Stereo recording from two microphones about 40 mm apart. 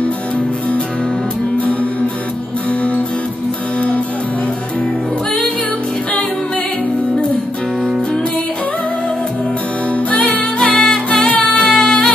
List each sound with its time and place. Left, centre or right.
1.6 s music: left
10.1 s music: left
10.7 s music: centre
11.1 s music: left
11.6 s music: centre